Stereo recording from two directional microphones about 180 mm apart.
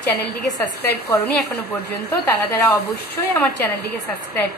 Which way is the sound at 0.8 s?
65° left (ahead or behind).